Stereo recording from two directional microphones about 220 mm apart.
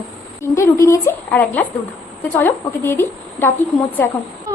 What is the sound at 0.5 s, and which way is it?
Speech, 15° left (ahead or behind).